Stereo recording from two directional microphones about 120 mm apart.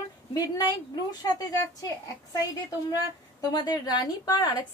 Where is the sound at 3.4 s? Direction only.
35° left (ahead or behind).